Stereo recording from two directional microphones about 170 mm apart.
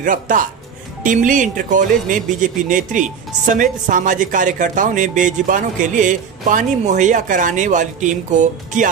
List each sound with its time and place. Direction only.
0.0 s speech: 50° right (ahead or behind)